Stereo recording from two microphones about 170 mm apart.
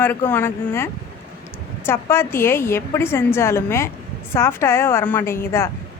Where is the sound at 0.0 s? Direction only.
10° left (ahead or behind).